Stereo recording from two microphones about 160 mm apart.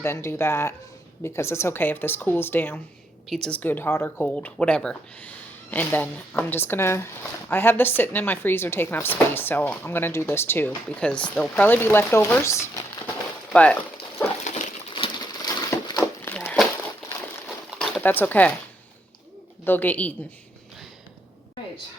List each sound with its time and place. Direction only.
0.0 s speech: 15° left (ahead or behind)
13.5 s dog: 10° left (ahead or behind)
14.9 s a sound: 30° left (ahead or behind)
16.3 s crumpling: 10° left (ahead or behind)
17.7 s a sound: 10° left (ahead or behind)
19.6 s speech: 10° left (ahead or behind)